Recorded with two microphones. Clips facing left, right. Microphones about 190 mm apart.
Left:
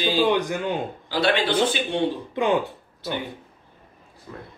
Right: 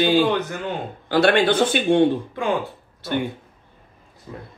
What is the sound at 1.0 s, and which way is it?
A man's voice, 55° right (ahead or behind).